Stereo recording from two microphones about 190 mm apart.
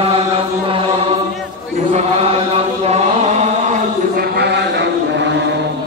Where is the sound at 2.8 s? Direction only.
35° right (ahead or behind).